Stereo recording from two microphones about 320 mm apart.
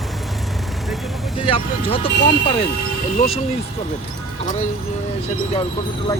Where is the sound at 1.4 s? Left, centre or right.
Centre.